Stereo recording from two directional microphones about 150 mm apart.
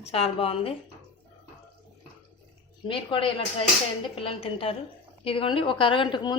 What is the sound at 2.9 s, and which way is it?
A woman's voice, 35° left (ahead or behind).